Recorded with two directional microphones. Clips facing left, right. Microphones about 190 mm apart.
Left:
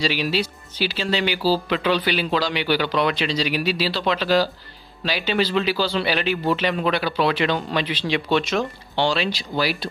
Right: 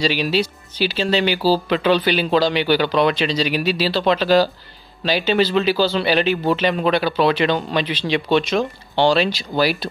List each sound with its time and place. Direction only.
0.0 s speech: 25° right (ahead or behind)